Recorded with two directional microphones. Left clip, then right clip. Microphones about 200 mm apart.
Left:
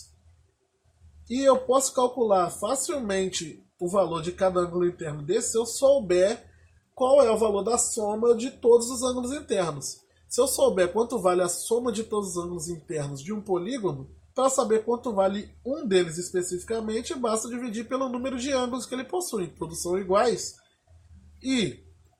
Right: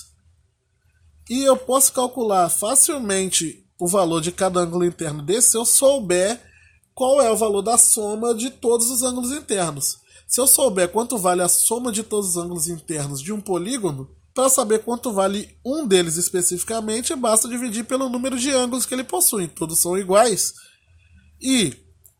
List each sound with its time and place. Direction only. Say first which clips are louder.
1.3 s speech: right 3 dB; 50° right (ahead or behind)
21.4 s speech: right 7 dB; 55° right (ahead or behind)